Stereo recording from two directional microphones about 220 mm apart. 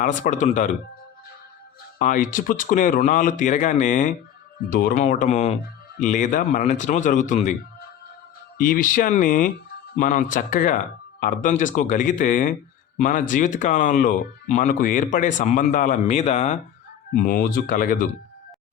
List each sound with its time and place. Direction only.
0.0 s speech: 35° left (ahead or behind)
2.0 s speech: 35° left (ahead or behind)
8.5 s speech: 40° left (ahead or behind)